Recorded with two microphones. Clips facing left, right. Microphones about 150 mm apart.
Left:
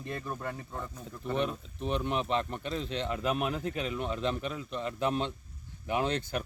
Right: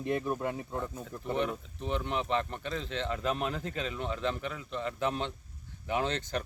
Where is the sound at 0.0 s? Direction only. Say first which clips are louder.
Right 6 dB; 15° right (ahead or behind).